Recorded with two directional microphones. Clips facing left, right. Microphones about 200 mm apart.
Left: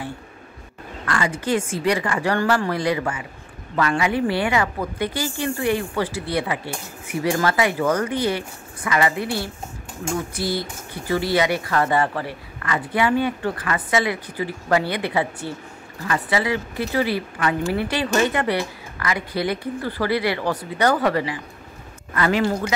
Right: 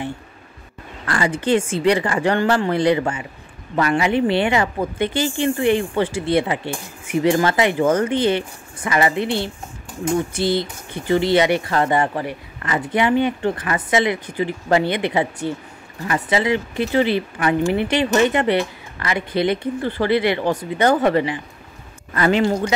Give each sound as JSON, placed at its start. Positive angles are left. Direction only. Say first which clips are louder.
{"t": 1.0, "sound": "speech", "louder": "right 3 dB", "side_deg": -30}